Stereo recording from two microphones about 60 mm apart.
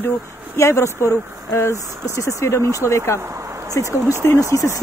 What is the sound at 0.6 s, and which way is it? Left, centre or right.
Speech, left.